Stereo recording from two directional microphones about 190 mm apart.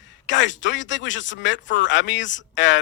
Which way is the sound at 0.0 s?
75° left (ahead or behind).